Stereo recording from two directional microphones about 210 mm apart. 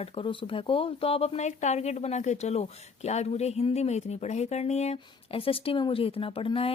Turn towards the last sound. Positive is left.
turn(degrees=25)  # may be behind; listen again after turning